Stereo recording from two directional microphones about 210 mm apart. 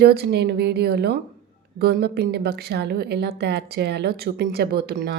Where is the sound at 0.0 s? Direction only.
50° right (ahead or behind).